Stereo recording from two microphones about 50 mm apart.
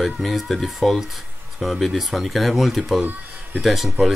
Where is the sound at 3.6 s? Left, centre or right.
Centre.